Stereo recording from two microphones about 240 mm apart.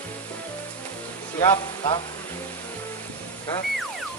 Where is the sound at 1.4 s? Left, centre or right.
Centre.